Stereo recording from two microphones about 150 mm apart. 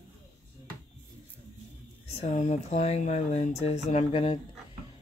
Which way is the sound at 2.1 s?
45° left (ahead or behind).